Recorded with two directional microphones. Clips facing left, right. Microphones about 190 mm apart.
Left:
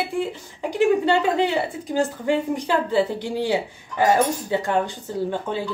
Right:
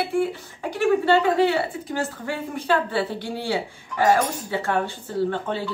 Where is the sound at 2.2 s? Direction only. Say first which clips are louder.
Left 3 dB; 15° left (ahead or behind).